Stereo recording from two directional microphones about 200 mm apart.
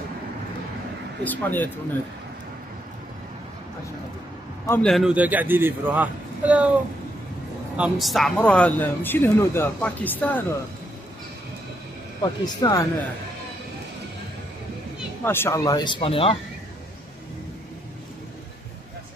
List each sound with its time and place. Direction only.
1.2 s speech: 10° left (ahead or behind)
4.6 s a man's voice: centre (ahead or behind)
7.7 s speech: 5° right (ahead or behind)
12.2 s speech: 20° left (ahead or behind)
15.2 s speech: 10° left (ahead or behind); by 16.3 s 25° left (ahead or behind)